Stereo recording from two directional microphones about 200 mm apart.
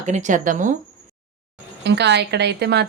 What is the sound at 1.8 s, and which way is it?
A woman's voice, 60° right (ahead or behind).